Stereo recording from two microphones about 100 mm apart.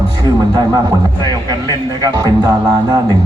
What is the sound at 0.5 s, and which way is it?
A man's voice, 40° right (ahead or behind).